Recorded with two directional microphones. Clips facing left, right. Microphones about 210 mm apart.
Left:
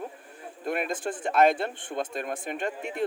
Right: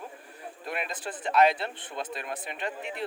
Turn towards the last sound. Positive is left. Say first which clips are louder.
# left 4 dB
turn(degrees=45)  # may be behind; listen again after turning